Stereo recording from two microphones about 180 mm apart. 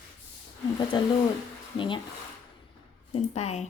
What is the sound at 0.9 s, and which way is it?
A woman's voice, 25° left (ahead or behind).